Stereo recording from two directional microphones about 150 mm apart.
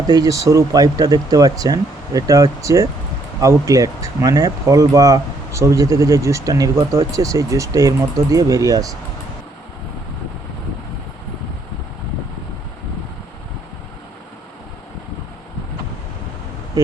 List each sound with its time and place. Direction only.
0.1 s speech: 25° right (ahead or behind)